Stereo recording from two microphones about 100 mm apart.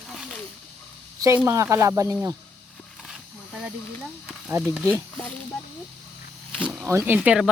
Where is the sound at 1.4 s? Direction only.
30° right (ahead or behind).